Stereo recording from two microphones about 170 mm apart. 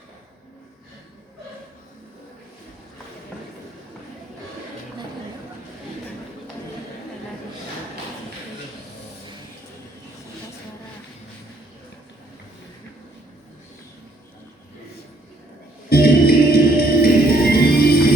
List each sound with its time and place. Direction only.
15.9 s music: 65° left (ahead or behind)